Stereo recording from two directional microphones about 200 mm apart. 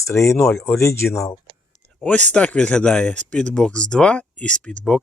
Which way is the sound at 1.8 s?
5° left (ahead or behind).